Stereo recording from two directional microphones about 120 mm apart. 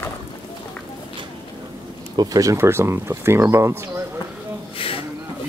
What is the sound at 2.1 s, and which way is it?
Speech, 30° right (ahead or behind).